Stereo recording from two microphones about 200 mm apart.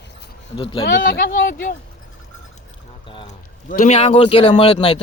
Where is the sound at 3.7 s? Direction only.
40° left (ahead or behind).